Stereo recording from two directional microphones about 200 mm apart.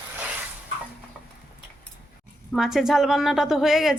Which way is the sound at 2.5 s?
Centre (ahead or behind).